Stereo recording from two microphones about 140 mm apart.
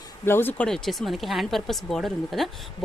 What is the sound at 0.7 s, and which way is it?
Speech, centre (ahead or behind).